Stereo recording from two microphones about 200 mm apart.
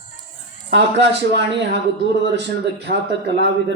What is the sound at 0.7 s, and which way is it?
Speech, 60° right (ahead or behind).